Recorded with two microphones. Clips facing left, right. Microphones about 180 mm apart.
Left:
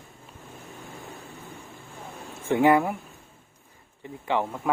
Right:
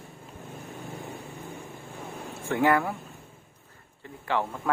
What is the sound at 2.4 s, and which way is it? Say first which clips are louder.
Speech: left 4 dB; 20° left (ahead or behind).